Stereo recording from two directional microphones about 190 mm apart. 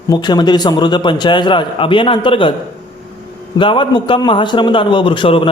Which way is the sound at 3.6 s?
25° left (ahead or behind).